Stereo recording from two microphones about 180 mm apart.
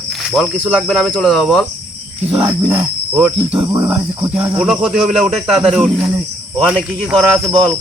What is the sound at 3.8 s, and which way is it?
Cricket, 10° right (ahead or behind).